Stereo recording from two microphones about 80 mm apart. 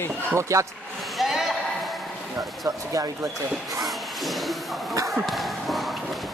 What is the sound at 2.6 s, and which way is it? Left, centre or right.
Speech, right.